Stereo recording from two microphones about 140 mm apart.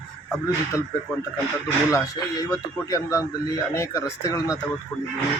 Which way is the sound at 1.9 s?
25° left (ahead or behind).